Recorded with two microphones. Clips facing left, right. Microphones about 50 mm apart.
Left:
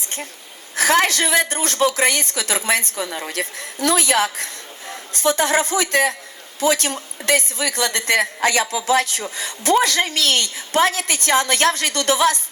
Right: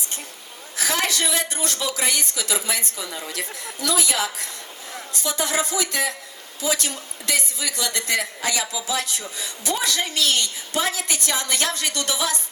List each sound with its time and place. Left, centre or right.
0.8 s a woman's voice: left